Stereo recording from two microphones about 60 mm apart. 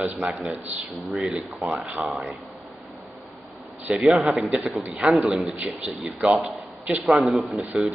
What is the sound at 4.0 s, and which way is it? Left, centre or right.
Speech, centre.